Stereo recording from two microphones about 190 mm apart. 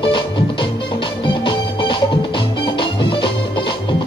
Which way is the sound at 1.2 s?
25° left (ahead or behind).